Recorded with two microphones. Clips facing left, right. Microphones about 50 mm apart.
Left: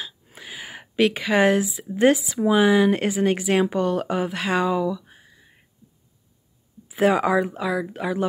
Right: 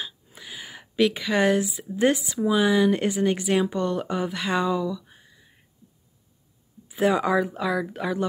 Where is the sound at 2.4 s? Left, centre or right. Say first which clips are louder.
Left 2 dB; left.